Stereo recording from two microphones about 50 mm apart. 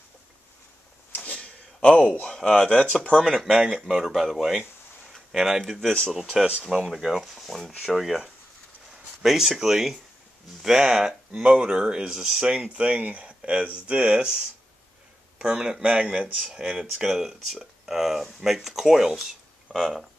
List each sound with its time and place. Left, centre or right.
1.1 s a sound: left
1.4 s a sound: centre
2.3 s speech: centre
3.3 s speech: centre
5.1 s a sound: centre
5.7 s speech: centre
6.1 s speech: centre
7.8 s speech: centre
19.7 s speech: centre